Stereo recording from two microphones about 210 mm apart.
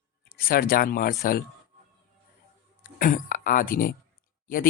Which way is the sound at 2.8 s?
45° left (ahead or behind).